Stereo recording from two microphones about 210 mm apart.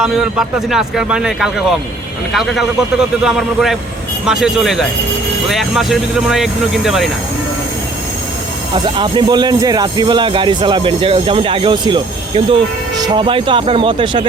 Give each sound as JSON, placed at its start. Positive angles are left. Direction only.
{"t": 0.0, "sound": "speech", "side_deg": 0}
{"t": 8.7, "sound": "speech", "side_deg": -20}